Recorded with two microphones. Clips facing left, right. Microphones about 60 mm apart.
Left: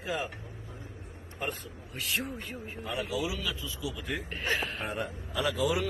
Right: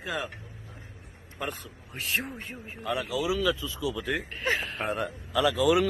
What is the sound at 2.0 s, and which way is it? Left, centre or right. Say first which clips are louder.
Speech: right 2 dB; right.